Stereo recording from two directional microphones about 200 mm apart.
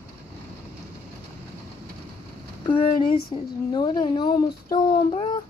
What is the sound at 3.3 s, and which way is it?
A child's voice, 20° left (ahead or behind).